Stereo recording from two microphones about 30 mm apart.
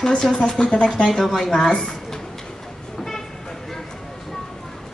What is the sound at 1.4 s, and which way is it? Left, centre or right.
Speech, centre.